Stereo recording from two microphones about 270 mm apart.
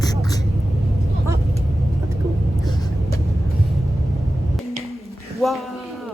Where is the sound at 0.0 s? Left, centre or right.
Centre.